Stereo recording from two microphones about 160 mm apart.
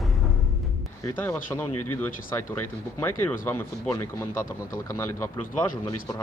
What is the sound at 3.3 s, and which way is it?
Speech, 10° left (ahead or behind).